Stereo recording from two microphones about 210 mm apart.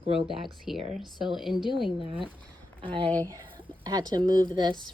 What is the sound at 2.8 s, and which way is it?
Speech, 25° right (ahead or behind).